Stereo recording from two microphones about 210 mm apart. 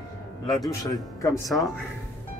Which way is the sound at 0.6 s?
15° left (ahead or behind).